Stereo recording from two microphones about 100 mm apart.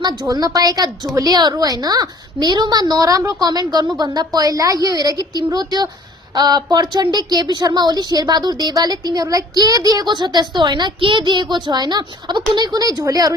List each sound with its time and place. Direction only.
0.0 s a woman's voice: 45° right (ahead or behind)